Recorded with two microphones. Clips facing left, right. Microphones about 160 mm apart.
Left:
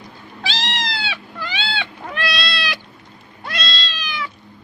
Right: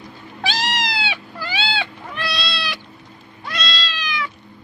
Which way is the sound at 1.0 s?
30° right (ahead or behind).